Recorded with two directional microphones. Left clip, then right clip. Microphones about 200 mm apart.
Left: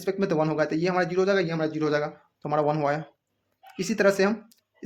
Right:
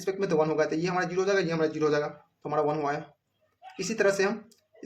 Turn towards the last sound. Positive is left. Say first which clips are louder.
# left 3 dB
turn(degrees=35)  # may be behind; listen again after turning